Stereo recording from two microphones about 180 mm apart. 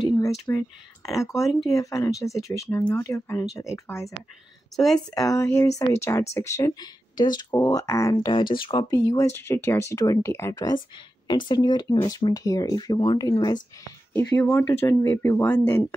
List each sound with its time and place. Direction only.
0.5 s speech: 15° left (ahead or behind)
14.1 s speech: 10° left (ahead or behind)